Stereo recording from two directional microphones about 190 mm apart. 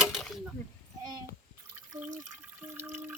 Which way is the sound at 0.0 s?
Centre (ahead or behind).